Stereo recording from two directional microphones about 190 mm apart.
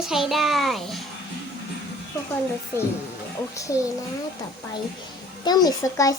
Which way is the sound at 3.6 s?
15° left (ahead or behind).